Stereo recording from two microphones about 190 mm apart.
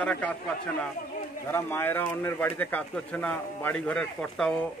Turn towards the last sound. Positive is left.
turn(degrees=5)  # may be behind; listen again after turning